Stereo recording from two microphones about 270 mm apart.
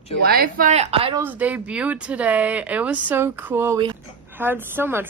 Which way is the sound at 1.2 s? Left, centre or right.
Centre.